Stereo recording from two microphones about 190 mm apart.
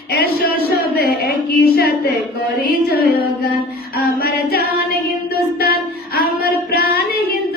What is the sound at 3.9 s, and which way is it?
Female singing, 55° left (ahead or behind).